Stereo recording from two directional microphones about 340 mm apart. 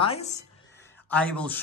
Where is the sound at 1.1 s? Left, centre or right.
Centre.